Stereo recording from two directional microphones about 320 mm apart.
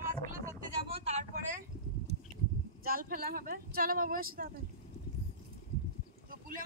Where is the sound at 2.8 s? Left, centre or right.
Right.